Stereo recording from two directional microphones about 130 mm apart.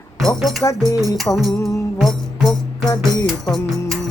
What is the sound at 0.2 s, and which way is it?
Speech, centre (ahead or behind).